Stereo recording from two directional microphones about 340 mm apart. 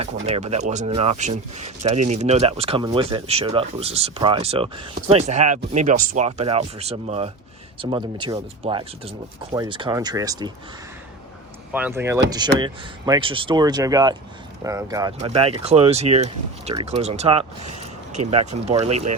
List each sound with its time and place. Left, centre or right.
0.0 s speech: centre
11.7 s speech: centre